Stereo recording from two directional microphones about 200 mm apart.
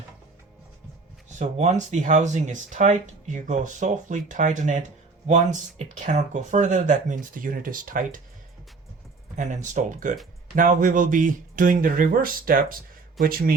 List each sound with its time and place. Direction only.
1.4 s speech: 35° right (ahead or behind)
5.9 s speech: 35° right (ahead or behind)
9.3 s speech: 35° right (ahead or behind)